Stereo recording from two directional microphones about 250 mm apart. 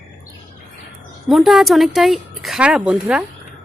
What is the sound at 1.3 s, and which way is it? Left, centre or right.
Speech, centre.